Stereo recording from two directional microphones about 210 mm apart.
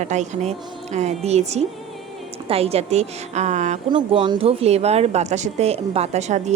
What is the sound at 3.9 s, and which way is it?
A woman's voice, 25° right (ahead or behind).